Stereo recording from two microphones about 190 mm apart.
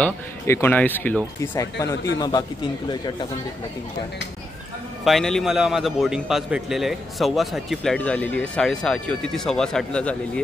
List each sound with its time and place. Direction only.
0.0 s a man's voice: 10° left (ahead or behind)
5.0 s a man's voice: centre (ahead or behind)